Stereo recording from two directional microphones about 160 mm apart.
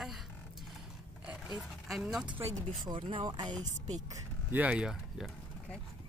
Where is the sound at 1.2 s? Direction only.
Centre (ahead or behind).